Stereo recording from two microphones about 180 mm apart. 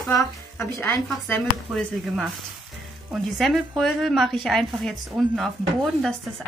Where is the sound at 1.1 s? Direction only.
Centre (ahead or behind).